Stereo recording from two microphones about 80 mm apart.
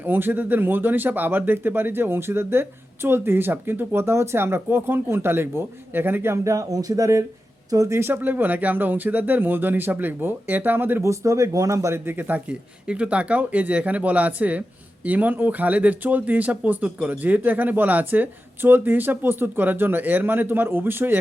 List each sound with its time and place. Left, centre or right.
0.0 s speech: right
6.3 s speech: right
11.0 s speech: right